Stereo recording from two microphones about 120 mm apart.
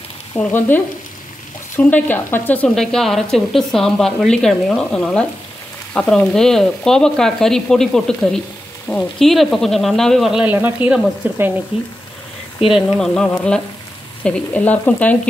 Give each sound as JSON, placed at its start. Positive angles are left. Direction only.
{"t": 0.4, "sound": "speech", "side_deg": 15}
{"t": 2.7, "sound": "speech", "side_deg": 5}
{"t": 10.4, "sound": "speech", "side_deg": -15}
{"t": 12.6, "sound": "speech", "side_deg": -5}
{"t": 14.2, "sound": "speech", "side_deg": 10}